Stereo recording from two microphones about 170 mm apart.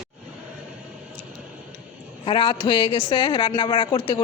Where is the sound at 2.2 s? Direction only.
30° left (ahead or behind).